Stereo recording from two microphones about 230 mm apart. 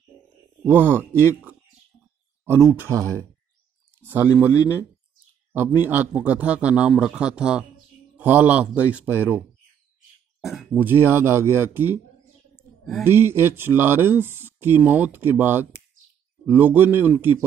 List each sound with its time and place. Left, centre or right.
0.7 s speech: centre
2.4 s a man's voice: centre
10.4 s speech: centre